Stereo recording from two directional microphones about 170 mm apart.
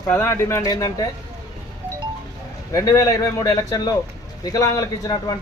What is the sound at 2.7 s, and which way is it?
Speech, 20° left (ahead or behind).